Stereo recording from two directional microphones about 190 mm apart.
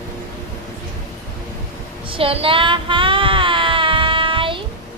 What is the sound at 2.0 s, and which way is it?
Child singing, 30° right (ahead or behind).